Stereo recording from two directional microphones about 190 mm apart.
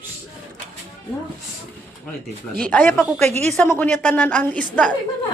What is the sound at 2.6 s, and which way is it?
A woman's voice, 10° left (ahead or behind).